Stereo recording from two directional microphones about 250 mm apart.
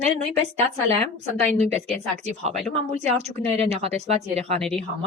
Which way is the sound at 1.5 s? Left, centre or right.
Right.